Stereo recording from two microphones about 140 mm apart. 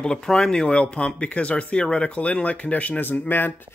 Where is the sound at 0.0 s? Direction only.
5° left (ahead or behind).